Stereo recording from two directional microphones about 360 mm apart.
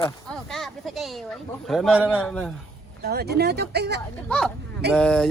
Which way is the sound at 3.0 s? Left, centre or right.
Right.